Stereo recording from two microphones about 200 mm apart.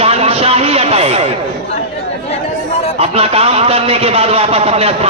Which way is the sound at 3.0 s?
30° right (ahead or behind).